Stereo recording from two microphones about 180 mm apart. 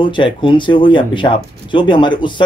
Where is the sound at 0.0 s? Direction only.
25° left (ahead or behind).